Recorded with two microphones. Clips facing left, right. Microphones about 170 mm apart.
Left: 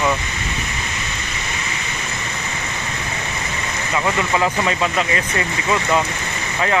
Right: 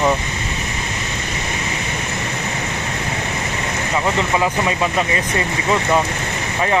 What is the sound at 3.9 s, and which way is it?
Speech, 20° right (ahead or behind).